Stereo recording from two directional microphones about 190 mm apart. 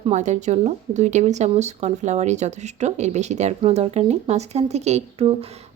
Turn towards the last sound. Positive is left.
turn(degrees=-30)  # may be behind; listen again after turning